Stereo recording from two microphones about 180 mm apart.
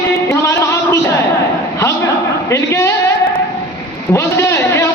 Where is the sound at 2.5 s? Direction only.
15° left (ahead or behind).